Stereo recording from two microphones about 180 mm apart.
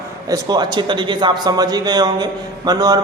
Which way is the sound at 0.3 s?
25° right (ahead or behind).